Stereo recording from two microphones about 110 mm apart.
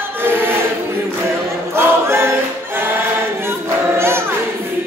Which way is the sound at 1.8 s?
20° right (ahead or behind).